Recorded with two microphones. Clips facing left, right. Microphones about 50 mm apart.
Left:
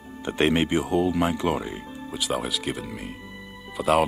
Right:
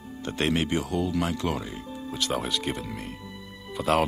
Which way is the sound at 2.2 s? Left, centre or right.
Centre.